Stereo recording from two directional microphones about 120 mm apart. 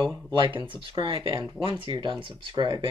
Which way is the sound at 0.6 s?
50° right (ahead or behind).